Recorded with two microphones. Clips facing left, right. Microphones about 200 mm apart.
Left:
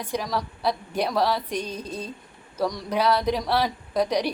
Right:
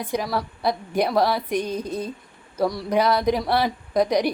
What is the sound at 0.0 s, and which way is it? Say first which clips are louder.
A woman's voice: right 3 dB; 10° right (ahead or behind).